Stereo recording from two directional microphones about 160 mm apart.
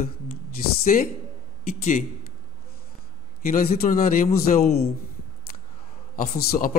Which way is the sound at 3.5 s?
65° left (ahead or behind).